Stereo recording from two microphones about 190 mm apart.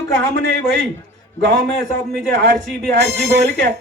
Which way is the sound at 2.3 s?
65° right (ahead or behind).